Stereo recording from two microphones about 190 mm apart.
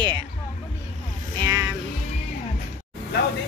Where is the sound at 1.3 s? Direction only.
15° right (ahead or behind).